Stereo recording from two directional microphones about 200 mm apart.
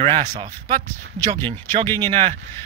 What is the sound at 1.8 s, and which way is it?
Speech, 10° left (ahead or behind).